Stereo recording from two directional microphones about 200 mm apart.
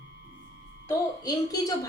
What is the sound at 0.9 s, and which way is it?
A woman's voice, 20° left (ahead or behind).